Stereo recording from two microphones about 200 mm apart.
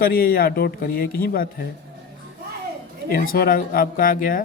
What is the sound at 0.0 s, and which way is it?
Speech, 50° left (ahead or behind).